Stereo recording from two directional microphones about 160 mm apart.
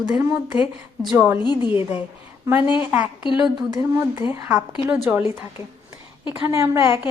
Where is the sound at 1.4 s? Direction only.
30° left (ahead or behind).